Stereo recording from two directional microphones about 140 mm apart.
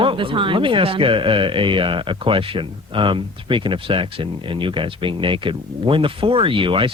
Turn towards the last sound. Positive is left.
turn(degrees=-35)  # may be behind; listen again after turning